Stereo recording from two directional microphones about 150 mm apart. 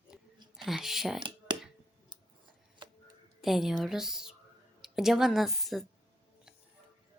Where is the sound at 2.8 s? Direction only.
30° right (ahead or behind).